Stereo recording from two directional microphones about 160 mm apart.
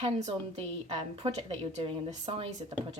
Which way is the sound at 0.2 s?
40° right (ahead or behind).